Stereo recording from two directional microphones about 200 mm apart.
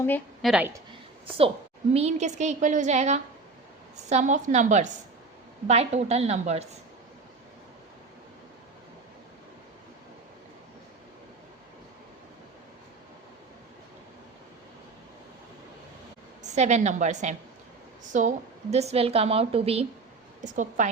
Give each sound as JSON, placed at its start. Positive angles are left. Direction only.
{"t": 0.4, "sound": "a woman's voice", "side_deg": -5}
{"t": 1.9, "sound": "a woman's voice", "side_deg": -30}
{"t": 16.4, "sound": "a woman's voice", "side_deg": -35}